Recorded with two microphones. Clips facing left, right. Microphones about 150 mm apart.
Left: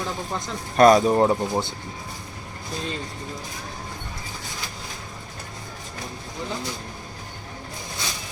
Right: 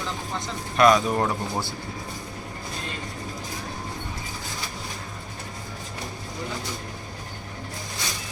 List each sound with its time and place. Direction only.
0.8 s speech: 35° left (ahead or behind)